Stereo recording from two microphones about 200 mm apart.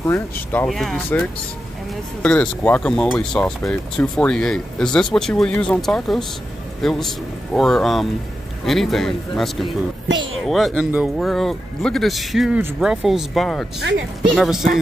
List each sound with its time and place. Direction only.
0.0 s a man's voice: 10° left (ahead or behind)
10.0 s speech: 70° right (ahead or behind)
10.4 s speech: centre (ahead or behind)